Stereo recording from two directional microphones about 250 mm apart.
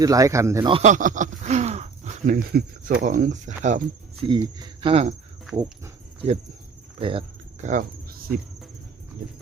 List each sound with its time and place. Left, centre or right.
0.0 s speech: centre; by 4.3 s right
4.3 s speech: centre
7.0 s cricket: right